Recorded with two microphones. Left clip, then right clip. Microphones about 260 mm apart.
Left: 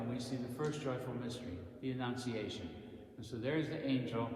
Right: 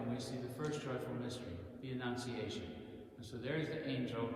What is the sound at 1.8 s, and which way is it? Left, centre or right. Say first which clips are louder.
A man's voice: left 2 dB; left.